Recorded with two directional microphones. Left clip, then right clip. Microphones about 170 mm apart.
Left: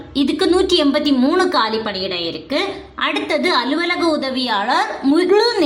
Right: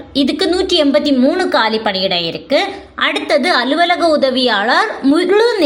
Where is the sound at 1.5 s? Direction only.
25° right (ahead or behind).